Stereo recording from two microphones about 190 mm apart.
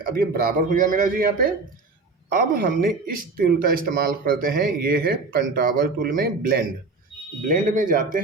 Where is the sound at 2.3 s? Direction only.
50° right (ahead or behind).